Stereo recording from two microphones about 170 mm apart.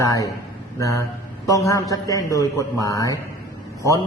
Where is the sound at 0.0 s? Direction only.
20° left (ahead or behind).